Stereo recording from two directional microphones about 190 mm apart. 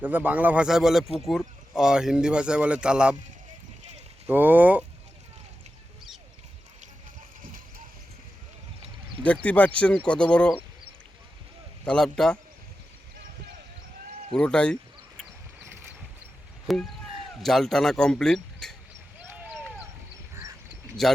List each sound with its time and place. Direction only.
0.0 s speech: 10° right (ahead or behind)
4.3 s speech: 10° right (ahead or behind)
9.2 s speech: 5° left (ahead or behind)
11.9 s speech: 5° left (ahead or behind)
14.3 s speech: 5° left (ahead or behind)
16.7 s speech: centre (ahead or behind)
19.3 s a sound: 10° right (ahead or behind)
21.0 s speech: centre (ahead or behind)